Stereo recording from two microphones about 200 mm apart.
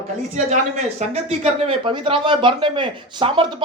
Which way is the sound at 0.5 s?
35° right (ahead or behind).